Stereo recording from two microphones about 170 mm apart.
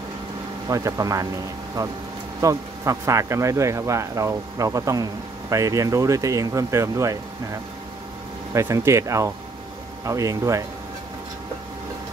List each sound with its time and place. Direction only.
0.7 s speech: 20° right (ahead or behind)
2.4 s speech: 20° right (ahead or behind)
8.5 s speech: 15° right (ahead or behind)